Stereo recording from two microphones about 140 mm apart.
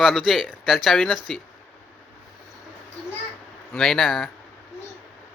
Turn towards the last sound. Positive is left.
turn(degrees=0)  # may be behind; listen again after turning